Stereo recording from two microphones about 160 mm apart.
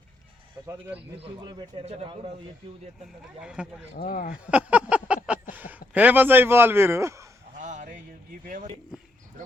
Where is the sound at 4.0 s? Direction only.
60° left (ahead or behind).